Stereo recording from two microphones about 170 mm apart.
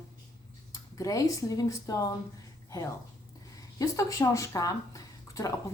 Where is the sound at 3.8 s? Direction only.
20° left (ahead or behind).